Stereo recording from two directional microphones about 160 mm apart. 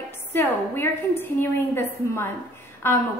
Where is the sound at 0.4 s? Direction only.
15° left (ahead or behind).